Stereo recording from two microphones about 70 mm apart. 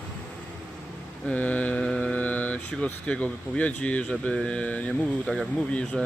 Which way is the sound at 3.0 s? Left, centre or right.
Centre.